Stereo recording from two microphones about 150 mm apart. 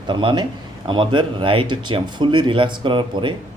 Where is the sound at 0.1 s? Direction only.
35° right (ahead or behind).